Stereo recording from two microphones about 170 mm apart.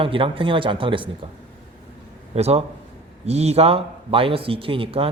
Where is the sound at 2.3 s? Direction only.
35° right (ahead or behind).